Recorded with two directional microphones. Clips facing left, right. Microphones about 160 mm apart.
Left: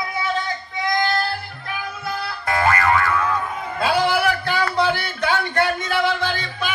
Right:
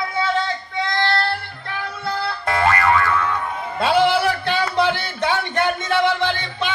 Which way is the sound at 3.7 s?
25° right (ahead or behind).